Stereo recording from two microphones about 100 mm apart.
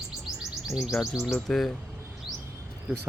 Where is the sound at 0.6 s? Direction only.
Centre (ahead or behind).